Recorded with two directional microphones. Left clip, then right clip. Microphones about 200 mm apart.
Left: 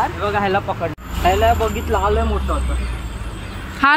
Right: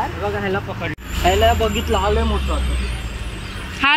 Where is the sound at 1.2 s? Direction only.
50° right (ahead or behind).